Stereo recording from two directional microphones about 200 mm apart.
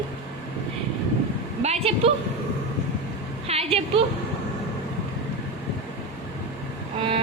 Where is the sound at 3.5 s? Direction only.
30° right (ahead or behind).